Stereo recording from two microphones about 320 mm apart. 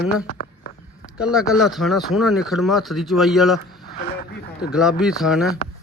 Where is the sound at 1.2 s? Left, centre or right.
Centre.